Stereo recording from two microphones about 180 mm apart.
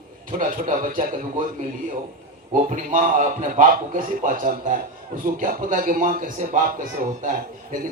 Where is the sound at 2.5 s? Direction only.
45° right (ahead or behind).